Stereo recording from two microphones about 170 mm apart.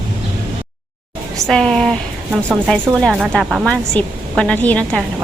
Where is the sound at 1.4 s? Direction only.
5° left (ahead or behind).